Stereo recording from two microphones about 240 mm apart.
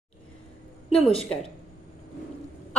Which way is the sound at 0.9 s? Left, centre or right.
Left.